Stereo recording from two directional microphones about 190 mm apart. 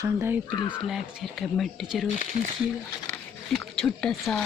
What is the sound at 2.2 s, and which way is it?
Speech, 45° right (ahead or behind).